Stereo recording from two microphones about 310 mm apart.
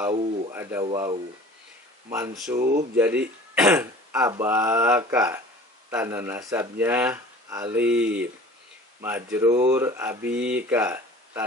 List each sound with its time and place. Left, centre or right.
0.0 s speech: centre
2.6 s speech: right
3.0 s speech: centre